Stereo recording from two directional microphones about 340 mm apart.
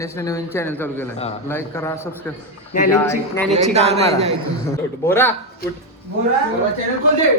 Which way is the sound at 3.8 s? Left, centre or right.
Centre.